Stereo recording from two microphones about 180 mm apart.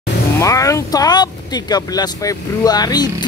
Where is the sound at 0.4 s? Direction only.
20° left (ahead or behind).